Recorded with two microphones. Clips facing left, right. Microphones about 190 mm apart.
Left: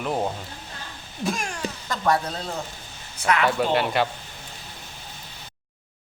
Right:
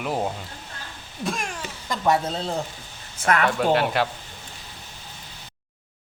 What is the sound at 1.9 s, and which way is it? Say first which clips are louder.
Speech: right 2 dB; 25° right (ahead or behind).